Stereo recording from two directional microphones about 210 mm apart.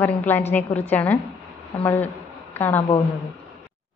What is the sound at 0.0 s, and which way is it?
A woman's voice, 10° left (ahead or behind).